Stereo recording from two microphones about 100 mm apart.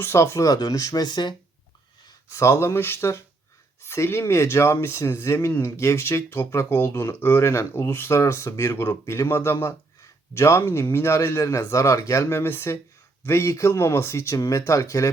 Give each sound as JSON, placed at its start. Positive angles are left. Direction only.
{"t": 0.0, "sound": "a man's voice", "side_deg": 25}
{"t": 2.3, "sound": "a man's voice", "side_deg": 30}